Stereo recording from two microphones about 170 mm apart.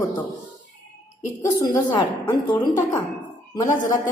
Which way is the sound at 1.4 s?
20° left (ahead or behind).